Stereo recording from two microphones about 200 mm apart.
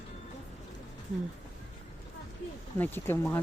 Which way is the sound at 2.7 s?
10° left (ahead or behind).